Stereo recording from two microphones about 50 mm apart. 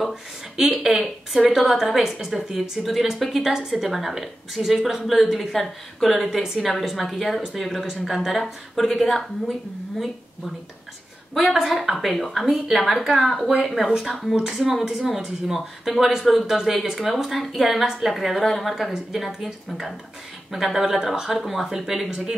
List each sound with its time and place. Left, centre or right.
0.1 s a woman's voice: centre
11.5 s a woman's voice: centre
14.6 s a woman's voice: centre
14.9 s a woman's voice: centre